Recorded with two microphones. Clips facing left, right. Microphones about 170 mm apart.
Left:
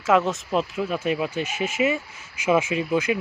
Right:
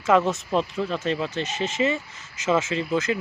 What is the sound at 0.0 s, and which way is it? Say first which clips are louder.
Speech: even; centre (ahead or behind).